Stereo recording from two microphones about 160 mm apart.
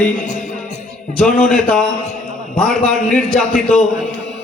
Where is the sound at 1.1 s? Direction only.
5° left (ahead or behind).